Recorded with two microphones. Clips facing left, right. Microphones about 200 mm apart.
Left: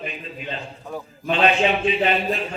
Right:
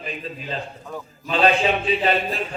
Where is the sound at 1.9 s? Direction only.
35° right (ahead or behind).